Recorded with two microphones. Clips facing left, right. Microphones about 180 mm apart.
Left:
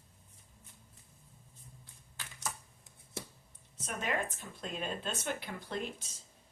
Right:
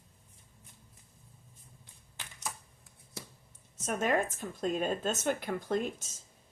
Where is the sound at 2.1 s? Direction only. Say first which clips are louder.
Even; 20° right (ahead or behind).